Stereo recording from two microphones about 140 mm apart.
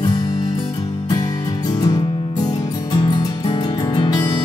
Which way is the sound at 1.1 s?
25° left (ahead or behind).